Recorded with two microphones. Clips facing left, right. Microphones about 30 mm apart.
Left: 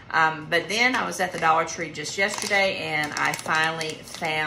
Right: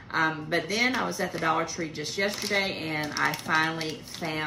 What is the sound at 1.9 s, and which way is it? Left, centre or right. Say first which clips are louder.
Speech: left 3 dB; left.